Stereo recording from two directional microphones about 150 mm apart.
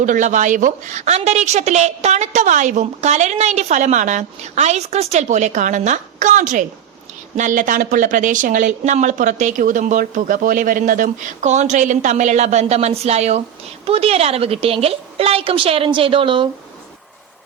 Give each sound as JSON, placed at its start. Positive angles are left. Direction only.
{"t": 0.0, "sound": "a woman's voice", "side_deg": -55}